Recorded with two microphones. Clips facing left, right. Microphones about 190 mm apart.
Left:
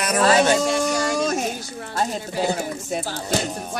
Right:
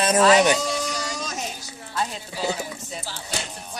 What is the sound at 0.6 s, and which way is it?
Speech, 50° left (ahead or behind).